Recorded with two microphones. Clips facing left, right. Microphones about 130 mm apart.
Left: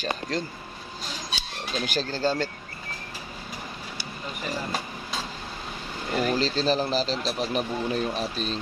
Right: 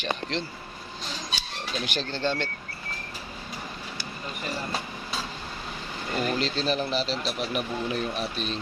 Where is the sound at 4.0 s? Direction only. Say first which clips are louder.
Left 1 dB; 5° left (ahead or behind).